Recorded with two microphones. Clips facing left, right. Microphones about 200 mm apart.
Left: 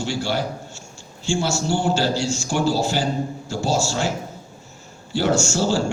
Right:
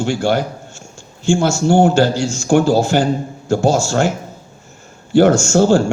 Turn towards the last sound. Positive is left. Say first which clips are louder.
# right 8 dB
turn(degrees=-55)  # may be behind; listen again after turning